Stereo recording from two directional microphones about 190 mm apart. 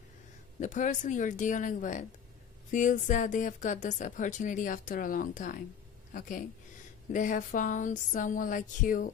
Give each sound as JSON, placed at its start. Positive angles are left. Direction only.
{"t": 0.6, "sound": "a woman's voice", "side_deg": 40}